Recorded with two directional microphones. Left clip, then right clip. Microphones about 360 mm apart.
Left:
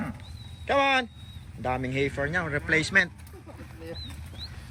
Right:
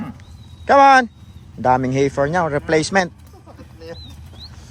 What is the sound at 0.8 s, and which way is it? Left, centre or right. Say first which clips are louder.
Speech: right 13 dB; right.